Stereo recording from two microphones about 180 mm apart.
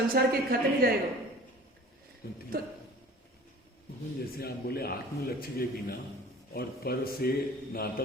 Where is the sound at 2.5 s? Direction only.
55° right (ahead or behind).